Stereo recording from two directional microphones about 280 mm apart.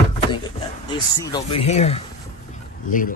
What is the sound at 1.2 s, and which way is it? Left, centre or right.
Speech, centre.